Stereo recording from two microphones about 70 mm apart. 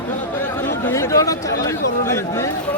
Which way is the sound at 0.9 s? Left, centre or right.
Left.